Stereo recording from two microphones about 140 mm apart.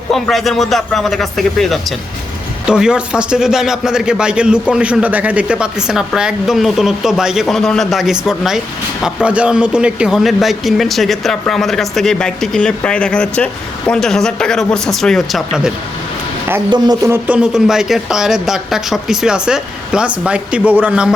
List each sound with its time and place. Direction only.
0.1 s a man's voice: centre (ahead or behind)
16.6 s speech: 30° right (ahead or behind)
17.1 s a man's voice: 10° right (ahead or behind)